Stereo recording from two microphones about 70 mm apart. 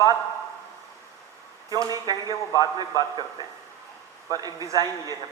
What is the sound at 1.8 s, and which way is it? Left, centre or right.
Speech, right.